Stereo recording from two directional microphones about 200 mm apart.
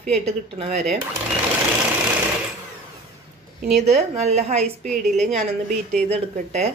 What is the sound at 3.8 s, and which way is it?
Speech, 35° right (ahead or behind).